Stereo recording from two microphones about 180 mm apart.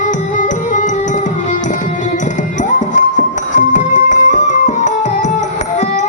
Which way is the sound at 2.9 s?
45° left (ahead or behind).